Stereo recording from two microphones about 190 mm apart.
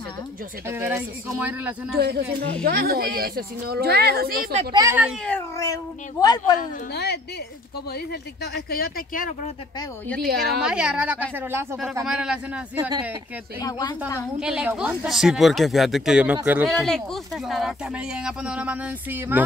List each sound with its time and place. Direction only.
0.7 s speech: 10° right (ahead or behind)
2.0 s speech: 55° right (ahead or behind)
4.7 s speech: 10° right (ahead or behind)
5.6 s speech: 20° left (ahead or behind)
6.9 s a woman's voice: 60° left (ahead or behind)
10.2 s speech: 60° right (ahead or behind)
10.6 s speech: 5° right (ahead or behind)
13.6 s speech: 20° left (ahead or behind)
14.4 s speech: 5° right (ahead or behind)
16.7 s speech: centre (ahead or behind)